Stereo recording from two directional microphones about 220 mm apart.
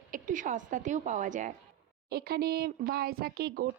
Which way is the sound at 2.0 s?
45° right (ahead or behind).